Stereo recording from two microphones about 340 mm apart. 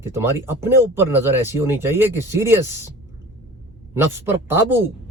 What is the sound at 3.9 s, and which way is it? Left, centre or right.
Speech, centre.